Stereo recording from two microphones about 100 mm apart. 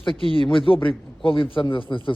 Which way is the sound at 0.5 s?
60° left (ahead or behind).